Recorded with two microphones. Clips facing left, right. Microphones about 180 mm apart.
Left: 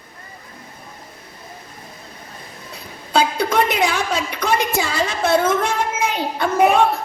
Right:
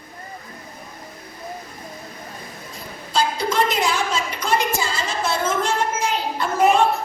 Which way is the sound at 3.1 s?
60° left (ahead or behind).